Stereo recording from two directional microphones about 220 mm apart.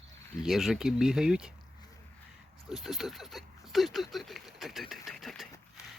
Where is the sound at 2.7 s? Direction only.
Centre (ahead or behind).